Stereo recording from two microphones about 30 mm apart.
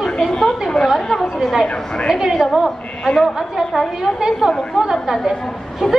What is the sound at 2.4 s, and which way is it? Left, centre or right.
A woman's voice, centre.